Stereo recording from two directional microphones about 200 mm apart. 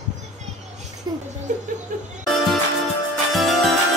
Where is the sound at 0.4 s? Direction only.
35° right (ahead or behind).